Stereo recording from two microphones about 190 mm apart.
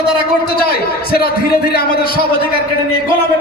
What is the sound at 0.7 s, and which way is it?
A man's voice, 55° left (ahead or behind).